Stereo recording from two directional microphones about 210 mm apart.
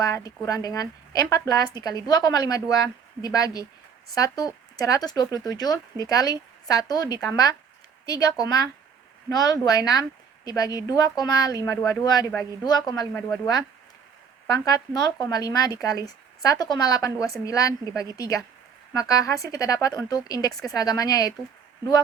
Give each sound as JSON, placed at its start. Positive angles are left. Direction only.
{"t": 0.0, "sound": "a woman's voice", "side_deg": 15}